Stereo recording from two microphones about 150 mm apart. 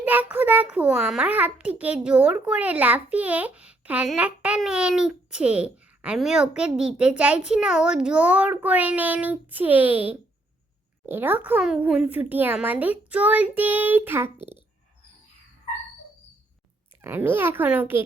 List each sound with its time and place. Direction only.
0.0 s a child's voice: 10° right (ahead or behind)
17.0 s a child's voice: 15° right (ahead or behind)